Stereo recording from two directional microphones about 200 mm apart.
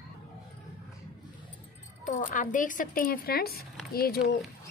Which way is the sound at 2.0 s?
40° left (ahead or behind).